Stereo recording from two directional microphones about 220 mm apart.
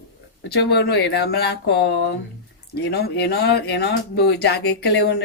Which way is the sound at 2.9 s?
50° left (ahead or behind).